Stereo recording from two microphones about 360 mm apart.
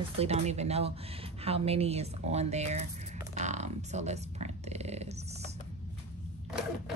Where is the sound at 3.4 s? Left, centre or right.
Centre.